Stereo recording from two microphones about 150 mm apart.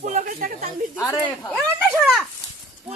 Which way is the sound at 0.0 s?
55° right (ahead or behind).